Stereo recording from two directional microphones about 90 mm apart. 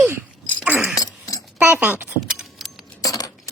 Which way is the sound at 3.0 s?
45° left (ahead or behind).